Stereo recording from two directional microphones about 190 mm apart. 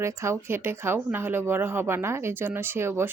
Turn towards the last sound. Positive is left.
turn(degrees=-10)  # may be behind; listen again after turning